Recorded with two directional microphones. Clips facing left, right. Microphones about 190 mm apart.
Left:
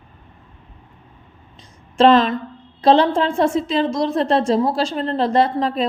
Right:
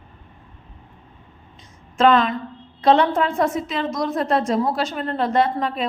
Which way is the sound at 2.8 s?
30° left (ahead or behind).